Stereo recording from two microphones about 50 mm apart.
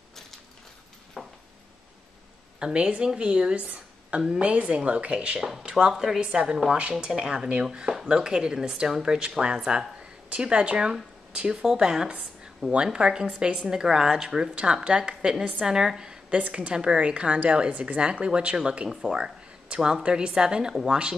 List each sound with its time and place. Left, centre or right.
1.2 s a sound: centre
2.6 s a woman's voice: right
5.7 s a woman's voice: centre
10.3 s a woman's voice: right
16.3 s a woman's voice: right
18.9 s speech: centre
19.1 s a woman's voice: centre